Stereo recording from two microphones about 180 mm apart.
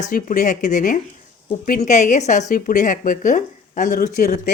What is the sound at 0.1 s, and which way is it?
A woman's voice, 50° left (ahead or behind).